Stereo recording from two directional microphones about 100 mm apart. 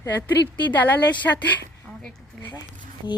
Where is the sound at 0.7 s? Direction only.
15° left (ahead or behind).